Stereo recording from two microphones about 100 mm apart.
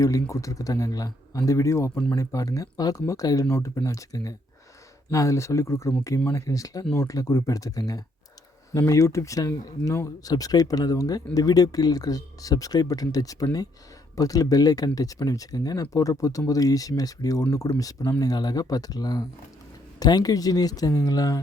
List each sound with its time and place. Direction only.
0.0 s speech: 35° left (ahead or behind)